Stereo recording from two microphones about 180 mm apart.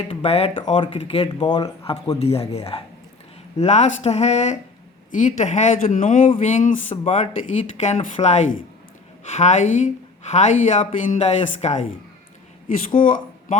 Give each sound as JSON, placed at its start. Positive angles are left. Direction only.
{"t": 0.1, "sound": "speech", "side_deg": 30}
{"t": 13.0, "sound": "speech", "side_deg": 50}